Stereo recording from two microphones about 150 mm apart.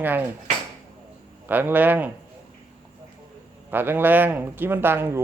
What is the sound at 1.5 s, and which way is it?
Speech, 10° right (ahead or behind).